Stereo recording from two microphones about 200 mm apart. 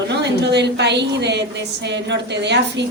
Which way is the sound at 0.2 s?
60° right (ahead or behind).